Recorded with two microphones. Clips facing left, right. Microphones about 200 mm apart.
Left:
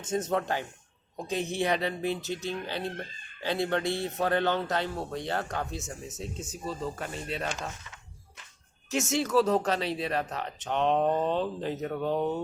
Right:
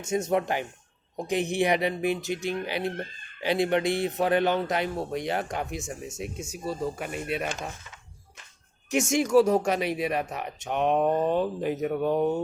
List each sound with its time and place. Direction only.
0.0 s a man's voice: 10° right (ahead or behind)
8.9 s a man's voice: 15° right (ahead or behind)